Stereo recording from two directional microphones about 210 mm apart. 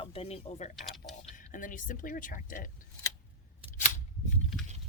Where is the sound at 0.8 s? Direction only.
Centre (ahead or behind).